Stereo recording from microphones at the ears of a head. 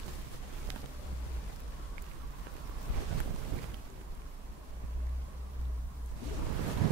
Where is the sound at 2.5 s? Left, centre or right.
Right.